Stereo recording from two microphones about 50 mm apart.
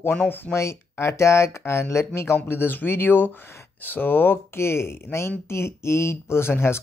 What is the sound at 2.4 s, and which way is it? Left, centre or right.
Speech, left.